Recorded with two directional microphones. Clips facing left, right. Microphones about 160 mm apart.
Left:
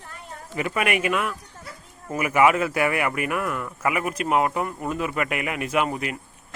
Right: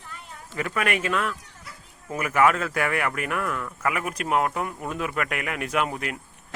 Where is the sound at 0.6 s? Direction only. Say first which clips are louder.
Left 2 dB; 10° left (ahead or behind).